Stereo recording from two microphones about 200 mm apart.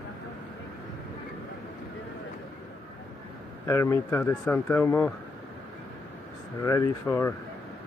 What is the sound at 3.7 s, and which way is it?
Speech, 15° left (ahead or behind).